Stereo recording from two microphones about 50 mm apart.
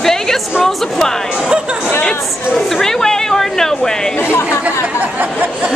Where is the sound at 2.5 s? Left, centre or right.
Centre.